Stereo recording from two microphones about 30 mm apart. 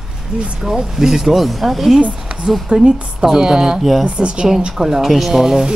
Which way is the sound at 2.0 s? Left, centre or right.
Right.